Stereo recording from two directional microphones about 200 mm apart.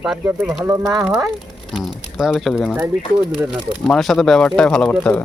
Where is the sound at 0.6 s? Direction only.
15° right (ahead or behind).